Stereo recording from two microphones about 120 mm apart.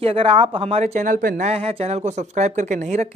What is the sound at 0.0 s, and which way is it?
Speech, 50° right (ahead or behind).